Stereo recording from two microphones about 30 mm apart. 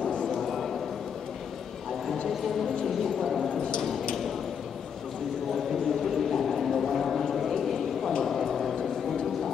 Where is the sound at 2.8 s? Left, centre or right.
Centre.